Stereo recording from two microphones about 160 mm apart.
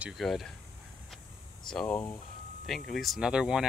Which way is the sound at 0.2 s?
Centre (ahead or behind).